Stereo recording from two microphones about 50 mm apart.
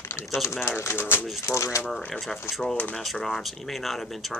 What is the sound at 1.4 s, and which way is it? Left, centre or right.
Speech, left.